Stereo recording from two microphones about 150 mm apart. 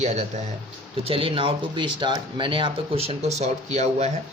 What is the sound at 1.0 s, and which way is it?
Speech, 35° right (ahead or behind).